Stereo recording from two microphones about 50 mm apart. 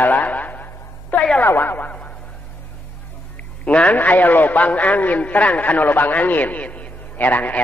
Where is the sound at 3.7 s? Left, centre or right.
Left.